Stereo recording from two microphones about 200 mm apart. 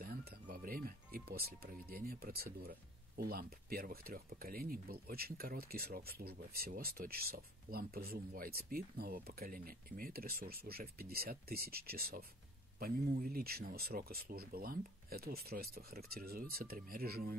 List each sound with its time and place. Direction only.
0.0 s speech: 50° right (ahead or behind)